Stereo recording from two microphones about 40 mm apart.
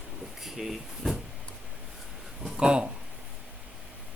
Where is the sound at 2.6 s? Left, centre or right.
Right.